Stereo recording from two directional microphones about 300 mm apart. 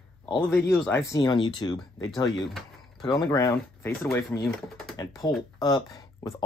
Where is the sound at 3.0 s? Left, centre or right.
Centre.